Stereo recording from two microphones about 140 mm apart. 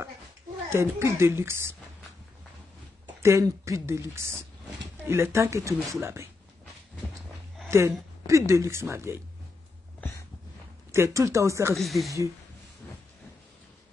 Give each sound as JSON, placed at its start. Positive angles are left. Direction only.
{"t": 0.7, "sound": "speech", "side_deg": -20}
{"t": 3.2, "sound": "speech", "side_deg": -20}
{"t": 7.7, "sound": "speech", "side_deg": -20}
{"t": 9.9, "sound": "a sound", "side_deg": 15}
{"t": 10.9, "sound": "speech", "side_deg": -20}
{"t": 11.7, "sound": "speech", "side_deg": 0}